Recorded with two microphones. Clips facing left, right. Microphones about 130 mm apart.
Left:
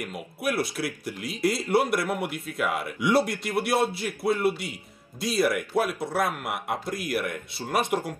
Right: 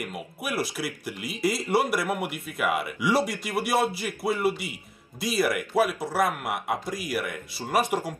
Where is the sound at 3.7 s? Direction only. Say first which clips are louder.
Right 3 dB; 60° right (ahead or behind).